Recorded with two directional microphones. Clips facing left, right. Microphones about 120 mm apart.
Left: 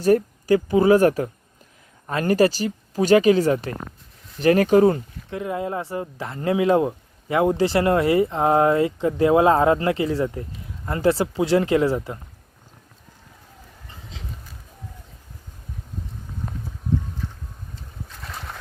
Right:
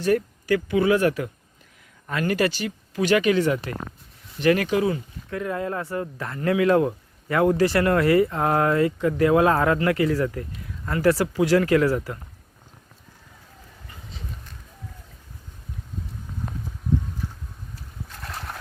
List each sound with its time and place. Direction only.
0.0 s speech: 40° left (ahead or behind)
5.3 s speech: 20° left (ahead or behind)
17.2 s boat: 10° right (ahead or behind)
17.7 s boat: centre (ahead or behind)